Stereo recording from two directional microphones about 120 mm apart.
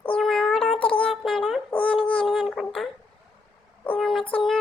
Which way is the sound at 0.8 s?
45° left (ahead or behind).